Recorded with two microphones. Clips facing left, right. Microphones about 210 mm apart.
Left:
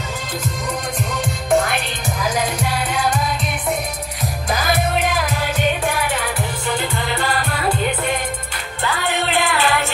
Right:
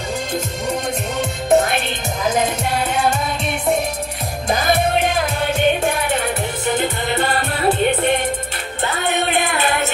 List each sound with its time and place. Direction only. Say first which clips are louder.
1.1 s music: right 3 dB; 20° right (ahead or behind)
4.5 s music: right 3 dB; 25° right (ahead or behind)